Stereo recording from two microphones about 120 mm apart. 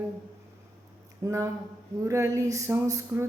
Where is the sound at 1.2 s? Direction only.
25° right (ahead or behind).